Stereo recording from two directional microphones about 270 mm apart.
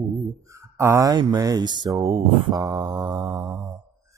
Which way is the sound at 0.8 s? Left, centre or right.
Centre.